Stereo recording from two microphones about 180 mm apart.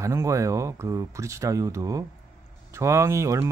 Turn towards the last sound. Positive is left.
turn(degrees=-15)  # may be behind; listen again after turning